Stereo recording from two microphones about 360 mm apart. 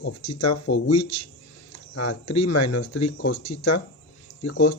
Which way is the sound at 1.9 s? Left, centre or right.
Left.